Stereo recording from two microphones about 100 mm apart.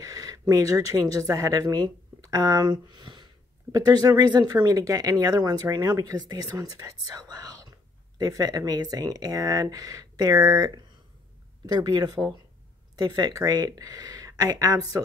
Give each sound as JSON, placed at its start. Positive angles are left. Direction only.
{"t": 0.0, "sound": "a woman's voice", "side_deg": -35}